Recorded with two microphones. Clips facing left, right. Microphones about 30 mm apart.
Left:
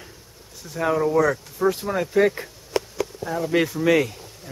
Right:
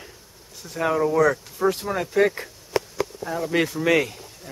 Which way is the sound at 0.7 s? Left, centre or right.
Centre.